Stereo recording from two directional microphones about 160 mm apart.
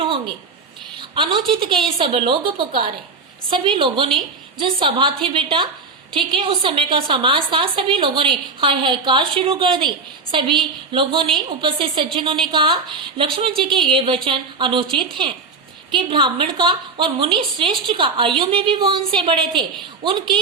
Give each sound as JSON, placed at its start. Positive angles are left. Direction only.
{"t": 0.9, "sound": "a woman's voice", "side_deg": -30}